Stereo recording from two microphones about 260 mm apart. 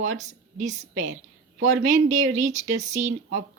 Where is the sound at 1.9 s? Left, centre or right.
Right.